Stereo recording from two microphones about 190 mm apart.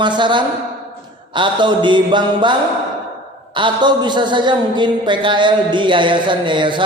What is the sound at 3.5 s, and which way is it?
A woman's voice, 25° right (ahead or behind).